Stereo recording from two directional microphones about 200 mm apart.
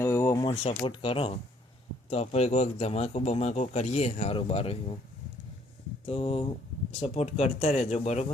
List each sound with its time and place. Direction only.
0.0 s a sound: 10° left (ahead or behind)
0.4 s speech: 25° left (ahead or behind)
6.1 s speech: 30° left (ahead or behind)